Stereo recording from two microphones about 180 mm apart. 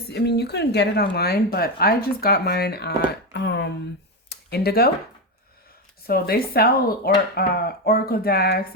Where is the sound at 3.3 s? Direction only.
75° left (ahead or behind).